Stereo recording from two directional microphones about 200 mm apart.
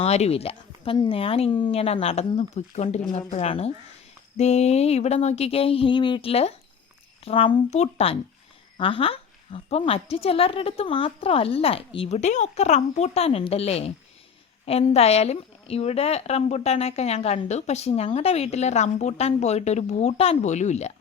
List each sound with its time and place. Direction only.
0.0 s a woman's voice: 30° left (ahead or behind)